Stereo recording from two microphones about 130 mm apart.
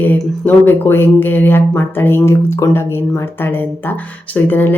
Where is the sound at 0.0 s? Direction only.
15° left (ahead or behind).